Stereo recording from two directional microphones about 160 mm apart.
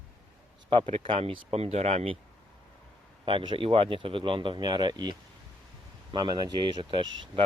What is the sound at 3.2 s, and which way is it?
Speech, 30° right (ahead or behind).